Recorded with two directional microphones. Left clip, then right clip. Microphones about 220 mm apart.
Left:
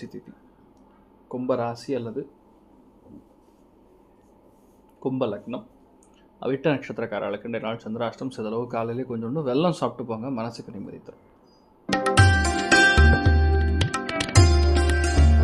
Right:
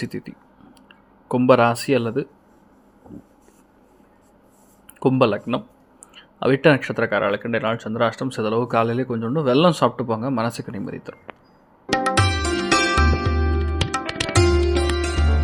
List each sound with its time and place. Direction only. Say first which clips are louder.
0.0 s speech: right 9 dB; 25° right (ahead or behind)
4.9 s speech: right 9 dB; 25° right (ahead or behind)
11.9 s music: right 1 dB; centre (ahead or behind)